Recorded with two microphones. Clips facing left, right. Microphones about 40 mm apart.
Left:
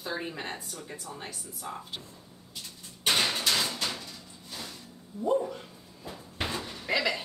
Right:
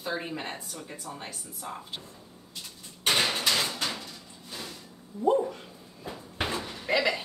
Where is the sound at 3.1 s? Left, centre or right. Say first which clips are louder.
Right 1 dB; centre.